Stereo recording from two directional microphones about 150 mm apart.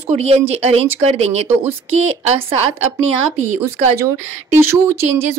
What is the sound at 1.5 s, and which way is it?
Speech, 15° right (ahead or behind).